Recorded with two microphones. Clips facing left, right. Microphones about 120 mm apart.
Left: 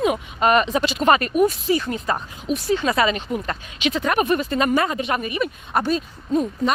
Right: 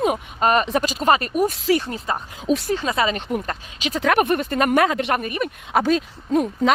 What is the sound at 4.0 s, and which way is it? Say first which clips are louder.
Speech: right 4 dB; 90° right.